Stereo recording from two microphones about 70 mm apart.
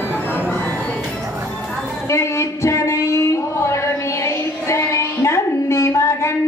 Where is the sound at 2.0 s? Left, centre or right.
Left.